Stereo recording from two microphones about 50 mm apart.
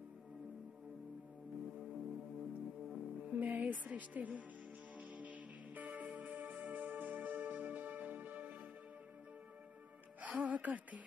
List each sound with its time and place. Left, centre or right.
1.8 s music: centre
3.3 s speech: right
4.9 s music: right
10.4 s music: right